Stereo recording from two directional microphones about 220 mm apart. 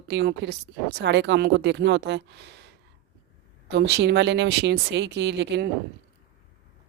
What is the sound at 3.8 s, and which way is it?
A woman's voice, 50° right (ahead or behind).